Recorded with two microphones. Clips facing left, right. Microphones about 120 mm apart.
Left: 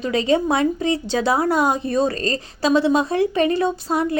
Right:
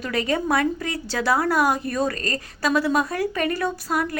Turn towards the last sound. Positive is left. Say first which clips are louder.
# left 4 dB
turn(degrees=25)  # may be behind; listen again after turning